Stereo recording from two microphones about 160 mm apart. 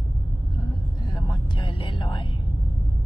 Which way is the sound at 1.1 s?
30° left (ahead or behind).